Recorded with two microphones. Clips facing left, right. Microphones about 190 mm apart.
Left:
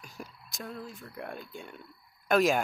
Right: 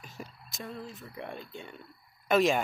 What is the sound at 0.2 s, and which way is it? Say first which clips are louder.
Speech: even; centre (ahead or behind).